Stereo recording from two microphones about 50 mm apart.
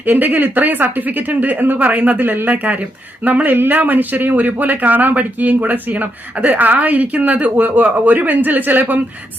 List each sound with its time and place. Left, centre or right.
0.0 s speech: right